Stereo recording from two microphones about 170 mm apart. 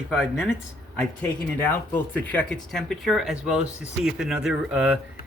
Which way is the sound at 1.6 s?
10° left (ahead or behind).